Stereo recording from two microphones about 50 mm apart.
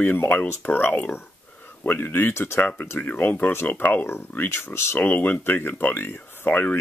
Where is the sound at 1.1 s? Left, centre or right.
Left.